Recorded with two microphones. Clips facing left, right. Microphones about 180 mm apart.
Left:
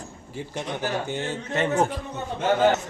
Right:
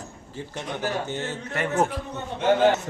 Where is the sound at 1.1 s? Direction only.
20° left (ahead or behind).